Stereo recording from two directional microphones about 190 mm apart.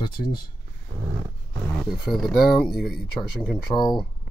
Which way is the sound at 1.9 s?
Centre (ahead or behind).